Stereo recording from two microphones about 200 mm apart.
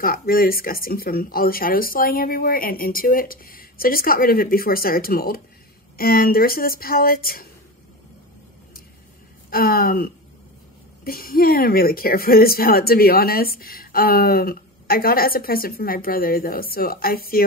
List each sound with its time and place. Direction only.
0.0 s speech: 45° left (ahead or behind)
9.5 s speech: 50° left (ahead or behind)